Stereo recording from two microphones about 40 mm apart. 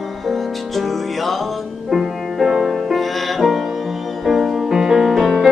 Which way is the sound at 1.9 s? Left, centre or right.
Centre.